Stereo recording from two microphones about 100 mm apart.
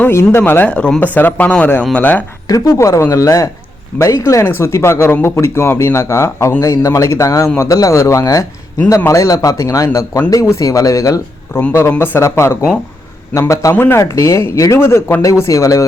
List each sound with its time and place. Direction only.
0.0 s speech: 25° left (ahead or behind)
0.7 s speech: 10° left (ahead or behind)
2.5 s speech: 35° left (ahead or behind)
11.7 s speech: 20° left (ahead or behind)
13.7 s speech: 20° left (ahead or behind)